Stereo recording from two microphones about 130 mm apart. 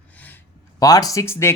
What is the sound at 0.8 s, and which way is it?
Speech, 25° left (ahead or behind).